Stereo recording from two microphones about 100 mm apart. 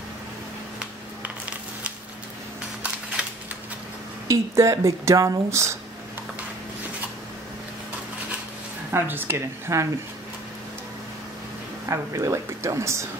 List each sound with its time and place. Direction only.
2.8 s a sound: 15° right (ahead or behind)
4.3 s speech: 30° right (ahead or behind)
8.9 s speech: 20° right (ahead or behind)
11.9 s speech: 30° right (ahead or behind)